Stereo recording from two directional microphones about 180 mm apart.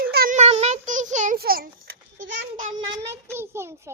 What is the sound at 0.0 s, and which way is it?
Child singing, 55° right (ahead or behind).